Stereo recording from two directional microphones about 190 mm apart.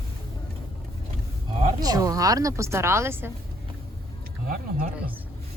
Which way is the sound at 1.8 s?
20° right (ahead or behind).